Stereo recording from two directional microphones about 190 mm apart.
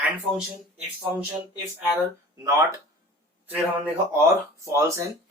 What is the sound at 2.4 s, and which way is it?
Speech, 15° right (ahead or behind).